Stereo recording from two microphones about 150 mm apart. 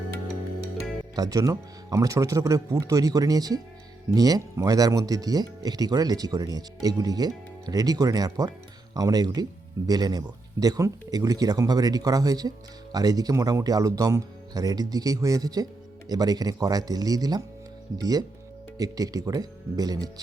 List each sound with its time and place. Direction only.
1.1 s speech: 25° right (ahead or behind)